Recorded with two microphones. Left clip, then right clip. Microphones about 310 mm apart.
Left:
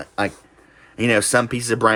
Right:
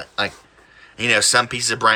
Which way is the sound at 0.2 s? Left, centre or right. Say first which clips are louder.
Even; centre.